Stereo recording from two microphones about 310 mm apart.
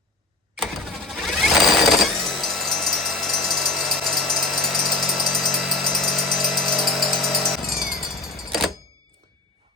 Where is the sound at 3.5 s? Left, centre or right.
Centre.